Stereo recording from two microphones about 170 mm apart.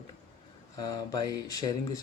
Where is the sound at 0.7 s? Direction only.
25° left (ahead or behind).